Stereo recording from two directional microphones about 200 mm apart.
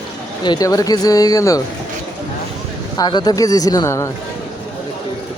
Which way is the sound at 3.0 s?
20° left (ahead or behind).